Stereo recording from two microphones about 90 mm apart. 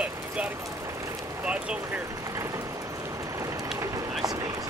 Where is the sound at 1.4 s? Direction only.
15° right (ahead or behind).